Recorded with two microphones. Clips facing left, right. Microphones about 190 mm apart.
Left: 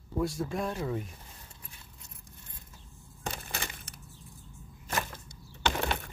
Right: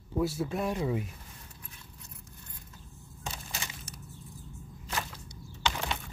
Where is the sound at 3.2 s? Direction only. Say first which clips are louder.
Left 3 dB; 60° left (ahead or behind).